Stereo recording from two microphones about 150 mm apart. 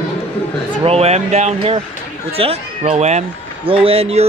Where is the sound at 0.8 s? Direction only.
40° right (ahead or behind).